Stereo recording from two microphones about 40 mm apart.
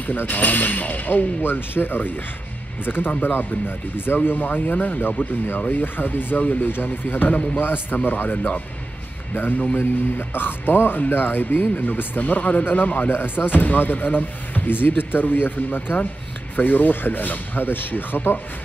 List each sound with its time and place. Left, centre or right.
0.0 s speech: left
13.1 s speech: left